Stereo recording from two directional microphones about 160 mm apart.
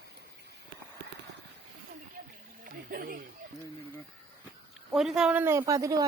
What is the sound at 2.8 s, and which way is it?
Speech, 65° right (ahead or behind).